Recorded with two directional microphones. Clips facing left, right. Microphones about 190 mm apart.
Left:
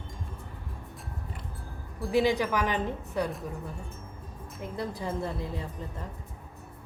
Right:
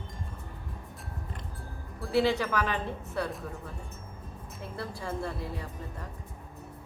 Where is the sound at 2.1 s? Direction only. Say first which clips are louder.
Left 1 dB; 15° left (ahead or behind).